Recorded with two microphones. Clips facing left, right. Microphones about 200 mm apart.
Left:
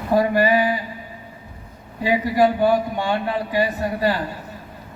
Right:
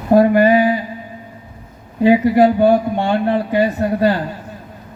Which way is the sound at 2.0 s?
55° right (ahead or behind).